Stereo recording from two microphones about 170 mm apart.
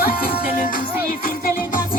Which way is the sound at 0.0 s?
60° left (ahead or behind).